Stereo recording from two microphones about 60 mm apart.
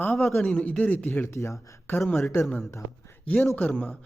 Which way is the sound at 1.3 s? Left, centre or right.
Left.